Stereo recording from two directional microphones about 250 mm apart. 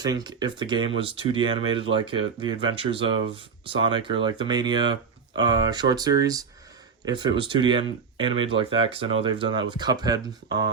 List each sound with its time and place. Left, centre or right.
0.0 s speech: centre